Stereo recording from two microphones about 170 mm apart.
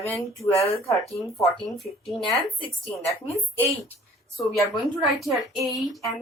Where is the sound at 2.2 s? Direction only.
30° left (ahead or behind).